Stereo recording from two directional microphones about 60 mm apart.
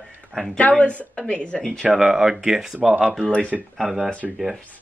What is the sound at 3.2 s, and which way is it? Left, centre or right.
Speech, centre.